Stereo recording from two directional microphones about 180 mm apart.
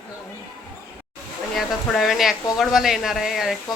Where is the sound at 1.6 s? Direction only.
Centre (ahead or behind).